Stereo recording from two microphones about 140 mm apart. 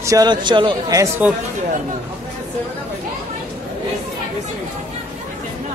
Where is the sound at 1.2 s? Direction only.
10° right (ahead or behind).